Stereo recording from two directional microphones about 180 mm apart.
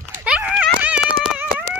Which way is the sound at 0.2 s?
5° right (ahead or behind).